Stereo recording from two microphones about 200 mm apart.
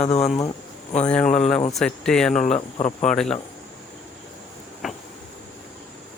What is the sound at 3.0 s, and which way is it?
Speech, 5° left (ahead or behind).